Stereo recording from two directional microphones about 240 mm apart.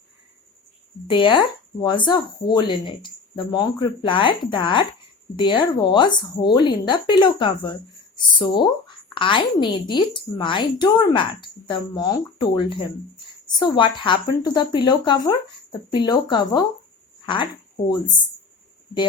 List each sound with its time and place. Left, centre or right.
1.0 s speech: centre